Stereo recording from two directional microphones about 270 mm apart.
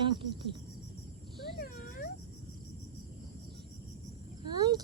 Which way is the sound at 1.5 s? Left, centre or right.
Left.